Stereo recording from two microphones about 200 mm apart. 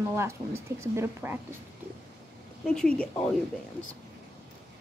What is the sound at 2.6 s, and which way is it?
Speech, 5° left (ahead or behind).